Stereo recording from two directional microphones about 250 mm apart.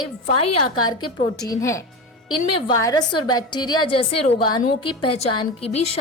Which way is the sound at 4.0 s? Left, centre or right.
Left.